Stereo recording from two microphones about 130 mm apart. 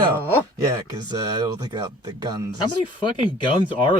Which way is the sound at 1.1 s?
30° right (ahead or behind).